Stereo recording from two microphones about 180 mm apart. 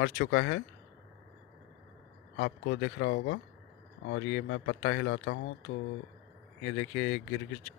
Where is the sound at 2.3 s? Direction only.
90° left.